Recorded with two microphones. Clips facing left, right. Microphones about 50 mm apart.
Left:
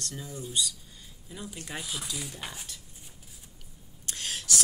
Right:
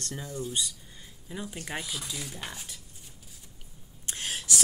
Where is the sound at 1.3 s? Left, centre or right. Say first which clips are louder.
Right 3 dB; right.